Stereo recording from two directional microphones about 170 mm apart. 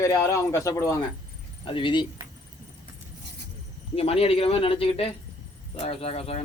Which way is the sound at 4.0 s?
35° left (ahead or behind).